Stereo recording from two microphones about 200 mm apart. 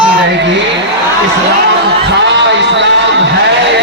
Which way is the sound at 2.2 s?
60° right (ahead or behind).